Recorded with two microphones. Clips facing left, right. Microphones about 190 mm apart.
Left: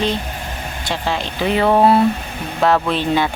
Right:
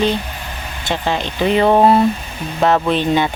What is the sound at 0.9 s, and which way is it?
Speech, centre (ahead or behind).